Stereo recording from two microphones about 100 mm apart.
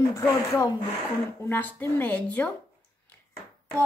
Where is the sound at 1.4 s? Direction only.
20° left (ahead or behind).